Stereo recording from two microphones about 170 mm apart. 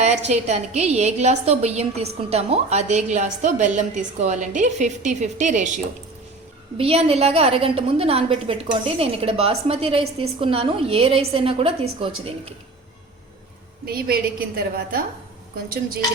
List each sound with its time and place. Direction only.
0.0 s a woman's voice: 40° right (ahead or behind)
6.7 s a woman's voice: 35° right (ahead or behind)
13.8 s a woman's voice: 60° right (ahead or behind)